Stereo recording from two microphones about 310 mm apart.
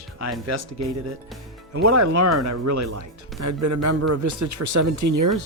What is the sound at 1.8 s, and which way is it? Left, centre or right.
Speech, right.